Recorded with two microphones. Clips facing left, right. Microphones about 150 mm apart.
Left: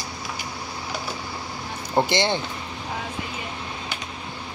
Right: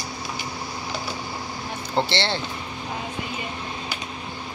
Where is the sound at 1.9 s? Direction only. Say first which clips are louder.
Left 3 dB; 15° left (ahead or behind).